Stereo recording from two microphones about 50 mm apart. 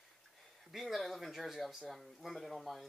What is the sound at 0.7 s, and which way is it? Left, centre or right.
Speech, centre.